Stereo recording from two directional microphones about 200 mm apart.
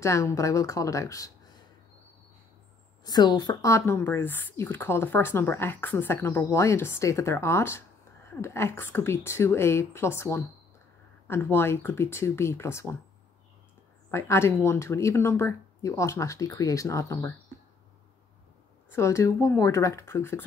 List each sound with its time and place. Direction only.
0.0 s speech: 15° left (ahead or behind)
3.0 s speech: 20° left (ahead or behind)
14.1 s speech: 10° left (ahead or behind)
18.9 s speech: 15° left (ahead or behind)